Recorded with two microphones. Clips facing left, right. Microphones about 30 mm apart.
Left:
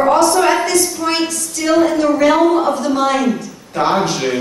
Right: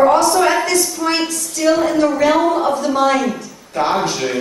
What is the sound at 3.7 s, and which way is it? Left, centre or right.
Speech, left.